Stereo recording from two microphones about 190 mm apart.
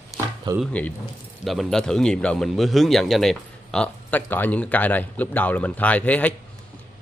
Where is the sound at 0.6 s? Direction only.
5° left (ahead or behind).